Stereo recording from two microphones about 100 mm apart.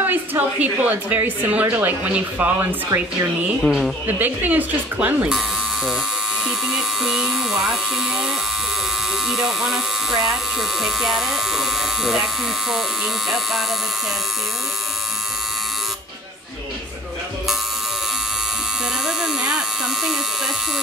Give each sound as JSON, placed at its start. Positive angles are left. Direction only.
{"t": 0.0, "sound": "a woman's voice", "side_deg": -20}
{"t": 3.6, "sound": "speech", "side_deg": 0}
{"t": 4.2, "sound": "a woman's voice", "side_deg": -15}
{"t": 6.4, "sound": "speech", "side_deg": -5}
{"t": 9.3, "sound": "speech", "side_deg": 0}
{"t": 19.0, "sound": "electric shaver", "side_deg": -5}